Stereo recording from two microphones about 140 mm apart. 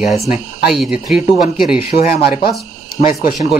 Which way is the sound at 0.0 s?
5° right (ahead or behind).